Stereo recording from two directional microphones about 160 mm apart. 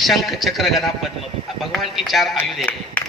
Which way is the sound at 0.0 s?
Centre (ahead or behind).